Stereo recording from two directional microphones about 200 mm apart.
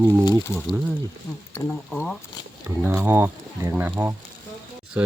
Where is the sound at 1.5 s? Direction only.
10° left (ahead or behind).